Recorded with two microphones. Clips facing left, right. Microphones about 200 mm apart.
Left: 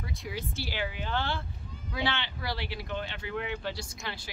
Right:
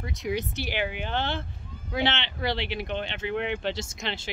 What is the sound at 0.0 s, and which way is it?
Speech, 20° right (ahead or behind).